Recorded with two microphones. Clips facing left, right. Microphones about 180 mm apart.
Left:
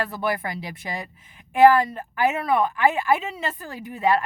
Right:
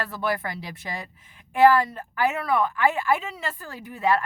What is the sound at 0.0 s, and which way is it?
A woman's voice, 15° left (ahead or behind).